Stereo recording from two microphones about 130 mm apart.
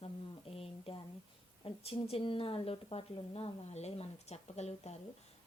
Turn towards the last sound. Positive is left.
turn(degrees=55)  # may be behind; listen again after turning